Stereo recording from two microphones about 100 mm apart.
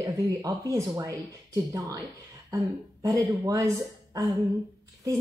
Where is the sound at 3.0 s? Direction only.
35° right (ahead or behind).